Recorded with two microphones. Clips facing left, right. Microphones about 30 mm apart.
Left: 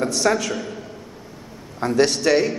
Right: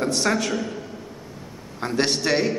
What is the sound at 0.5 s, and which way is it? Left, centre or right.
Speech, centre.